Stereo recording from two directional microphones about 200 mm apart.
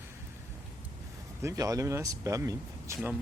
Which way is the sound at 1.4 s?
15° right (ahead or behind).